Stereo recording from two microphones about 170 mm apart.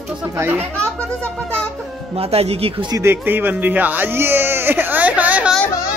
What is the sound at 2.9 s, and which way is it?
Speech, 15° right (ahead or behind).